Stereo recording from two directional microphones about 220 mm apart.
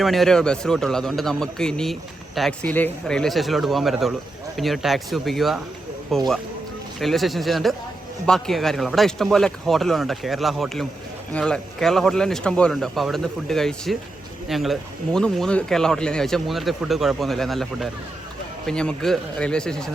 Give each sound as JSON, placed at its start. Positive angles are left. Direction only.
{"t": 0.0, "sound": "speech", "side_deg": 0}